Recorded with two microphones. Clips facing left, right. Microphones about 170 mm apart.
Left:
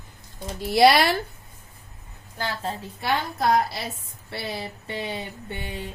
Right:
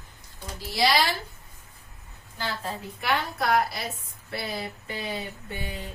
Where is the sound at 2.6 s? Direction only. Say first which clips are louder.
Left 3 dB; 25° left (ahead or behind).